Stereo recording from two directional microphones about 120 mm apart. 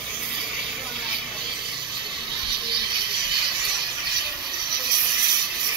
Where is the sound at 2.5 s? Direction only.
40° right (ahead or behind).